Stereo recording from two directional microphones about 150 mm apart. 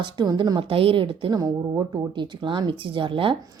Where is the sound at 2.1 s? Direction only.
30° right (ahead or behind).